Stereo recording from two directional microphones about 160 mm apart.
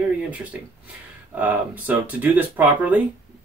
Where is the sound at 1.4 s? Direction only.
10° right (ahead or behind).